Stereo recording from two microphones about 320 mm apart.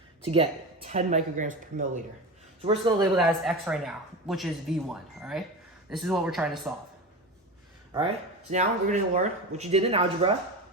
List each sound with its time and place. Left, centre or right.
0.9 s a man's voice: right
3.2 s speech: centre
7.9 s speech: centre